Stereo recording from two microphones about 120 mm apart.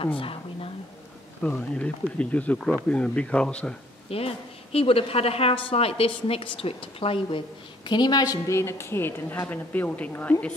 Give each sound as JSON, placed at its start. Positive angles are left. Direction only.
{"t": 0.0, "sound": "a sound", "side_deg": 50}
{"t": 1.4, "sound": "speech", "side_deg": 10}
{"t": 4.1, "sound": "a woman's voice", "side_deg": 55}